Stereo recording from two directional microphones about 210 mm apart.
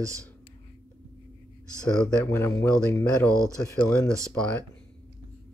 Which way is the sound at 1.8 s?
10° left (ahead or behind).